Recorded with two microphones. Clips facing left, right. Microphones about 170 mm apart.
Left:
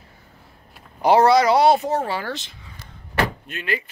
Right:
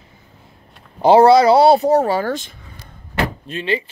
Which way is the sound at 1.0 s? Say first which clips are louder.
Right 5 dB; 30° right (ahead or behind).